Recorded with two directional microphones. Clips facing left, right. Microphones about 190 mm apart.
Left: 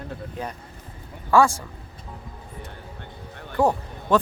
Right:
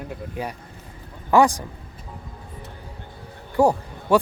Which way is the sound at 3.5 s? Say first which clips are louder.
Right 3 dB; 10° right (ahead or behind).